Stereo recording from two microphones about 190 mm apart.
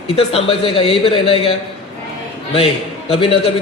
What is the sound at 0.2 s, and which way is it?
A man's voice, 30° left (ahead or behind).